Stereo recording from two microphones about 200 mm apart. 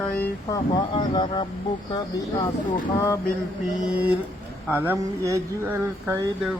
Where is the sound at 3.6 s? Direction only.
5° right (ahead or behind).